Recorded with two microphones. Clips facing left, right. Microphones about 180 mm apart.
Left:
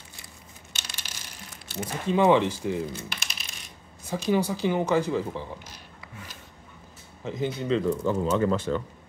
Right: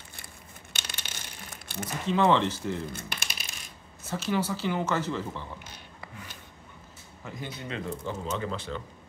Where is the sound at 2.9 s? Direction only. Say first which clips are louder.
Left 2 dB; 55° right (ahead or behind).